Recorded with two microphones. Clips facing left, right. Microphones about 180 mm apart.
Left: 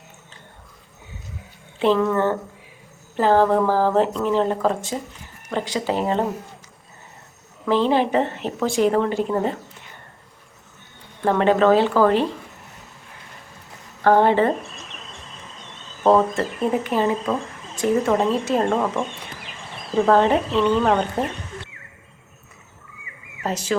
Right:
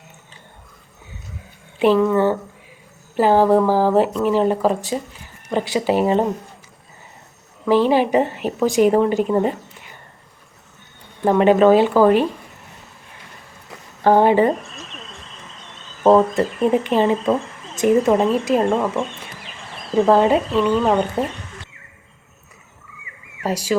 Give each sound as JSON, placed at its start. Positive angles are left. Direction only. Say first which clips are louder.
{"t": 1.8, "sound": "a woman's voice", "louder": "right 3 dB", "side_deg": -10}
{"t": 7.6, "sound": "a woman's voice", "louder": "right 3 dB", "side_deg": -10}
{"t": 11.3, "sound": "a woman's voice", "louder": "right 4 dB", "side_deg": -15}
{"t": 14.0, "sound": "a woman's voice", "louder": "right 2 dB", "side_deg": -15}
{"t": 16.0, "sound": "a woman's voice", "louder": "right 3 dB", "side_deg": -15}
{"t": 20.1, "sound": "a woman's voice", "louder": "right 2 dB", "side_deg": -10}
{"t": 23.4, "sound": "speech", "louder": "right 3 dB", "side_deg": -10}